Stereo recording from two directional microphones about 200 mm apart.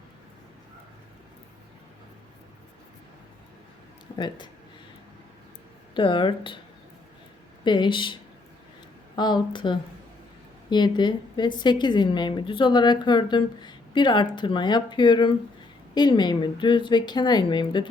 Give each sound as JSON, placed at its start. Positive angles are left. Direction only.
{"t": 5.9, "sound": "a woman's voice", "side_deg": 25}
{"t": 7.6, "sound": "a woman's voice", "side_deg": 25}